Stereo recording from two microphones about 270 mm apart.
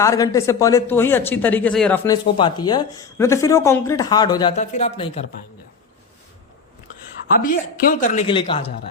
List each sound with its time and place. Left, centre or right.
0.0 s speech: centre
2.0 s speech: centre
7.4 s a woman's voice: left